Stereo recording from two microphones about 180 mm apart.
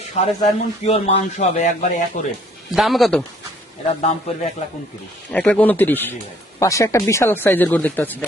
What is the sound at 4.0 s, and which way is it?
Speech, 35° left (ahead or behind).